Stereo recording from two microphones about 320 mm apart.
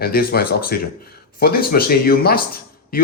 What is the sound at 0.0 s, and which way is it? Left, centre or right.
Speech, left.